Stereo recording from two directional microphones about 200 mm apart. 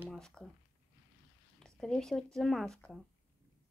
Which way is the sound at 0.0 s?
Centre (ahead or behind).